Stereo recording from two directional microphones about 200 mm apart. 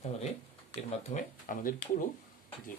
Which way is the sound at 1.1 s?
40° left (ahead or behind).